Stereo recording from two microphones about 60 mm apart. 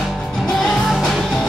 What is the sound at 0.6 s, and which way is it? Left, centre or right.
Music, centre.